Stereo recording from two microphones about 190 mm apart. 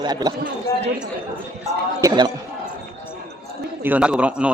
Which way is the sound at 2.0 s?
25° right (ahead or behind).